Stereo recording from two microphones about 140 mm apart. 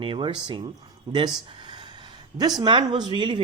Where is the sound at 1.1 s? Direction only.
30° right (ahead or behind).